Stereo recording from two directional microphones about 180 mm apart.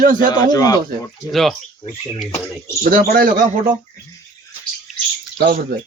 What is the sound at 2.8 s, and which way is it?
Speech, 50° right (ahead or behind).